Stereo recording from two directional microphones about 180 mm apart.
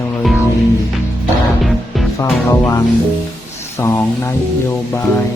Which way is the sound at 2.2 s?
15° left (ahead or behind).